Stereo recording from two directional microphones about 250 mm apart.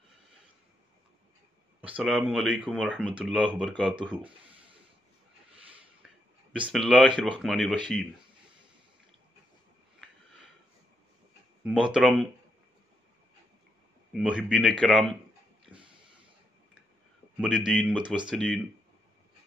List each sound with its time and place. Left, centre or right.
2.0 s speech: centre
6.5 s speech: centre
11.6 s speech: centre
14.1 s speech: centre
15.6 s a sound: centre
17.4 s speech: centre